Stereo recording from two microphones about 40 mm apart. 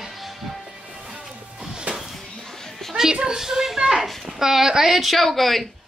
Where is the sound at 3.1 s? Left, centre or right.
Centre.